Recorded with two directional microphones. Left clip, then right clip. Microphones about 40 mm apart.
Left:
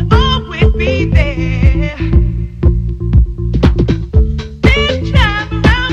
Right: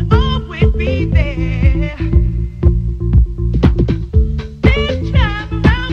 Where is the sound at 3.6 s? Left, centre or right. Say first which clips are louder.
Left 2 dB; centre.